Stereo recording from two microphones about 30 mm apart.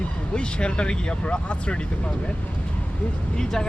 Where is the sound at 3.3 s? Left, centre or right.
Left.